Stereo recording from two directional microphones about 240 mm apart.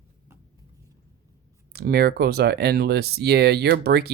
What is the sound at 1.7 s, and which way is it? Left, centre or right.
Speech, right.